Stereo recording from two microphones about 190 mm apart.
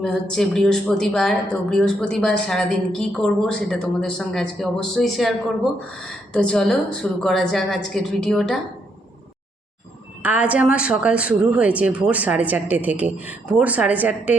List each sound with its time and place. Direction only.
0.0 s speech: centre (ahead or behind)
6.3 s speech: 5° left (ahead or behind)
10.2 s a woman's voice: 5° right (ahead or behind)